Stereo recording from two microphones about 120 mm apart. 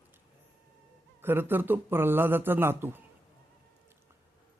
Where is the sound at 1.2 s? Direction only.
20° right (ahead or behind).